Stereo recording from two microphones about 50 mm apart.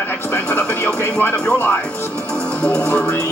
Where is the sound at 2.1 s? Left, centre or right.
Left.